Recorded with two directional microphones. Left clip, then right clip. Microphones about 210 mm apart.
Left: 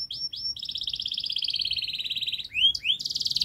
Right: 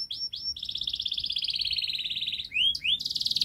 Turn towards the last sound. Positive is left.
turn(degrees=5)  # may be behind; listen again after turning